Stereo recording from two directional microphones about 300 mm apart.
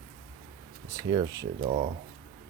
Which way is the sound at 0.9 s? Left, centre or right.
Centre.